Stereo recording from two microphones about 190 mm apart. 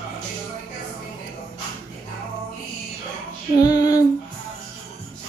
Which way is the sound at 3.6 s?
20° left (ahead or behind).